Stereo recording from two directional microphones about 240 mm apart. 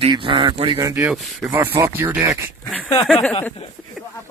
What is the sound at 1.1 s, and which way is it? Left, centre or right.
Speech, centre.